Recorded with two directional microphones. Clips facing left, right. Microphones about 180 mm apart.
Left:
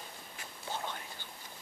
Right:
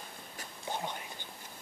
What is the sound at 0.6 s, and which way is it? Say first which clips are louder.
Whispering: right 2 dB; 15° right (ahead or behind).